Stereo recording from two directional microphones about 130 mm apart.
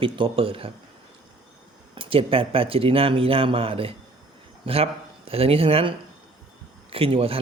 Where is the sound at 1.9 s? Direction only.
45° right (ahead or behind).